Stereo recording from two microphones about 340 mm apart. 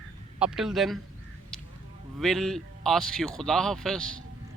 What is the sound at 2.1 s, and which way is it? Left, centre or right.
A man's voice, centre.